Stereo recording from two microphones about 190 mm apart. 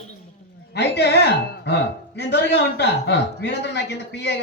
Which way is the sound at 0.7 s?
60° left (ahead or behind).